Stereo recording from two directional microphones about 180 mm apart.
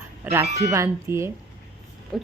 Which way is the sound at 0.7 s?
15° right (ahead or behind).